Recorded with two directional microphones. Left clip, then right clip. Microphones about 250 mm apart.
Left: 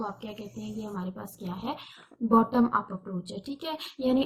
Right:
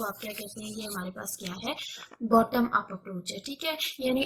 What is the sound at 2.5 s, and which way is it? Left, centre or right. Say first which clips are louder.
Speech: left 1 dB; right.